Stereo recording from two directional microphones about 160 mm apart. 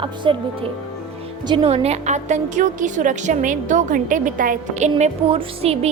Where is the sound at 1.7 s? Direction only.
40° right (ahead or behind).